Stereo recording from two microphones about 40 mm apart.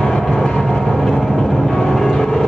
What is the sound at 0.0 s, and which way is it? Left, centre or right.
Vehicle, centre.